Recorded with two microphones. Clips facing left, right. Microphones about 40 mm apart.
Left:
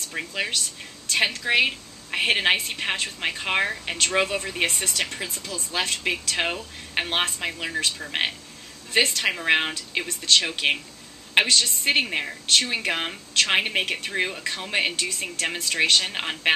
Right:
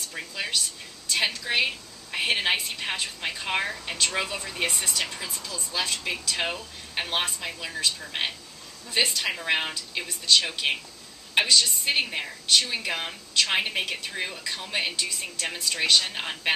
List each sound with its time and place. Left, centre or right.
0.3 s a woman's voice: left
4.6 s a woman's voice: left
6.3 s speech: left
7.5 s a woman's voice: left
8.9 s speech: left
9.4 s a woman's voice: left
10.0 s speech: left
10.6 s a woman's voice: left
11.3 s a woman's voice: left
15.0 s speech: left